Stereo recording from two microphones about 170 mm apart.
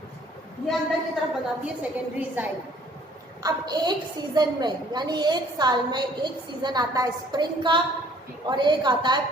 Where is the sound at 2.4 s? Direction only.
10° right (ahead or behind).